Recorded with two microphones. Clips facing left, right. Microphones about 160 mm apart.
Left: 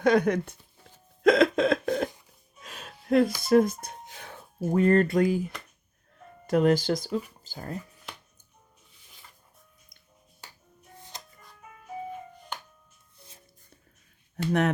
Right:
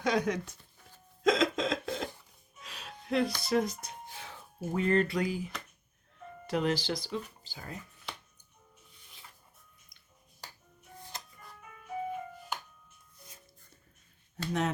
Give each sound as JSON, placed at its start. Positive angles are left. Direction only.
{"t": 0.0, "sound": "speech", "side_deg": 55}
{"t": 1.2, "sound": "a sound", "side_deg": 60}
{"t": 1.8, "sound": "cough", "side_deg": 55}
{"t": 2.6, "sound": "music", "side_deg": 50}
{"t": 3.4, "sound": "speech", "side_deg": 50}
{"t": 6.5, "sound": "speech", "side_deg": 45}